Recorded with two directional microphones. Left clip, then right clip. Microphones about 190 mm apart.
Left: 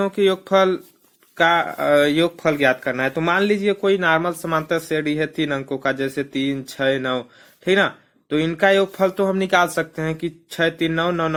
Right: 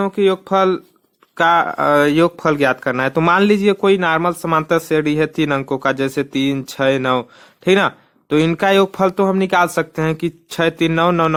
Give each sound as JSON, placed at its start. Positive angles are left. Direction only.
{"t": 0.0, "sound": "speech", "side_deg": -25}